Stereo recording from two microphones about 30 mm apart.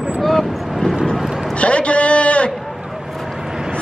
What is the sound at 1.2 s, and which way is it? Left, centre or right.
Vehicle, centre.